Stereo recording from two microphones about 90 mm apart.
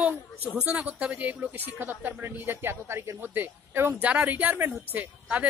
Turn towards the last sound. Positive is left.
turn(degrees=-15)  # may be behind; listen again after turning